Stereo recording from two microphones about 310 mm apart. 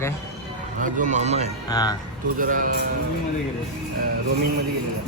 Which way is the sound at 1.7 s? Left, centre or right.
Centre.